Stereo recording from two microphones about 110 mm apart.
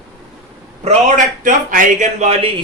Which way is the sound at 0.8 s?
75° right (ahead or behind).